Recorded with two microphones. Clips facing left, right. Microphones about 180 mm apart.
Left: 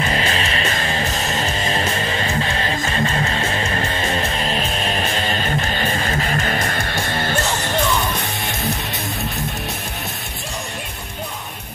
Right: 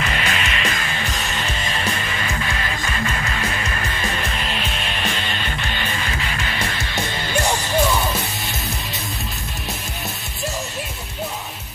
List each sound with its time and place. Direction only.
0.0 s music: 35° left (ahead or behind); by 7.3 s 55° left (ahead or behind)